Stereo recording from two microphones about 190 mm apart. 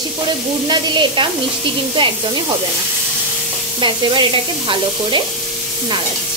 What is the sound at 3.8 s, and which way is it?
Sizzle, 25° right (ahead or behind).